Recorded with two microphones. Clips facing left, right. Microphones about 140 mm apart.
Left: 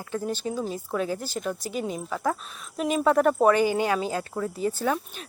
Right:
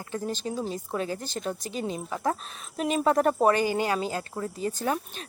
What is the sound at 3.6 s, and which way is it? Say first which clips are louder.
Speech: left 2 dB; 15° left (ahead or behind).